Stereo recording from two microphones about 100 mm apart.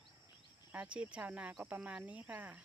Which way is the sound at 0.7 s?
15° right (ahead or behind).